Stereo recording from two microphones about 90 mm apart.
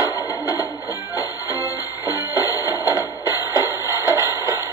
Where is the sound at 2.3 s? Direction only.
40° left (ahead or behind).